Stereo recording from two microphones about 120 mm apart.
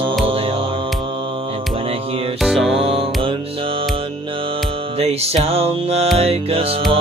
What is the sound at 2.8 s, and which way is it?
Music, 50° right (ahead or behind).